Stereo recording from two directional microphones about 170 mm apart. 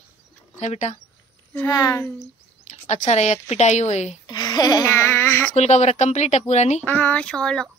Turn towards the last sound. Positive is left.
turn(degrees=5)  # may be behind; listen again after turning